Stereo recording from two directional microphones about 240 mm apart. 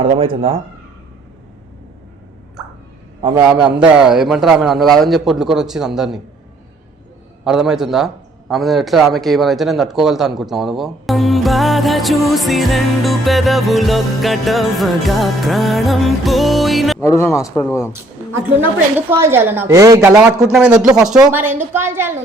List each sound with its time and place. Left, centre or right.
0.0 s speech: right
3.2 s a man's voice: right
3.4 s a man's voice: centre
7.4 s a man's voice: centre
17.0 s speech: centre
18.9 s a woman's voice: centre